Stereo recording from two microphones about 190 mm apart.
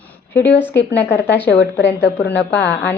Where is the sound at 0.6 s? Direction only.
10° left (ahead or behind).